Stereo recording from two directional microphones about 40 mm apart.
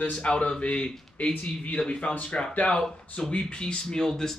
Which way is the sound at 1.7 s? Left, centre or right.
Left.